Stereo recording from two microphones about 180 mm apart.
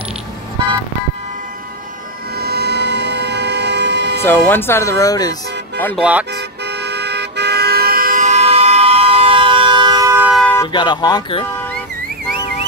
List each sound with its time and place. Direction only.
2.3 s train: 60° right (ahead or behind)
4.2 s speech: 10° left (ahead or behind)
5.9 s speech: 5° right (ahead or behind)
6.3 s car: 70° right (ahead or behind); by 10.3 s 15° right (ahead or behind)
10.3 s vehicle: 10° left (ahead or behind)
10.7 s speech: 25° left (ahead or behind)